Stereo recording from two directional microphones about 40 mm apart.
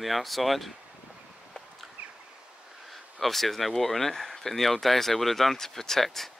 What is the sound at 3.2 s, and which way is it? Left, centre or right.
Speech, centre.